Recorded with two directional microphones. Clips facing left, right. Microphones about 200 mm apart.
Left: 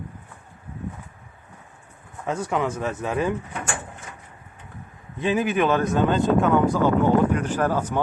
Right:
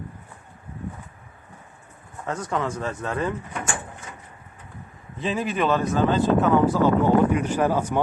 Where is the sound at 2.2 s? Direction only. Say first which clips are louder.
Left 2 dB; 10° left (ahead or behind).